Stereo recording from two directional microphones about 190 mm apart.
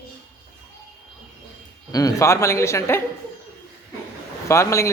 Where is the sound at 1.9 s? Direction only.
20° left (ahead or behind).